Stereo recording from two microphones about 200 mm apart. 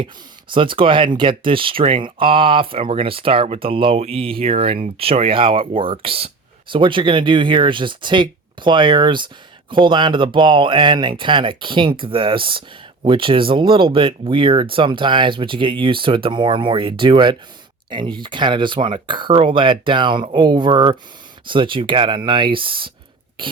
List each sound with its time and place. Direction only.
0.5 s speech: 25° right (ahead or behind)